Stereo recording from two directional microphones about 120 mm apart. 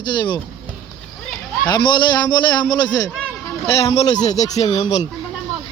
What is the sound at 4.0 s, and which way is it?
Speech, 70° left (ahead or behind).